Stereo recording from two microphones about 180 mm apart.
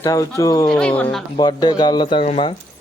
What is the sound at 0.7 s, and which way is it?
Speech, 5° left (ahead or behind).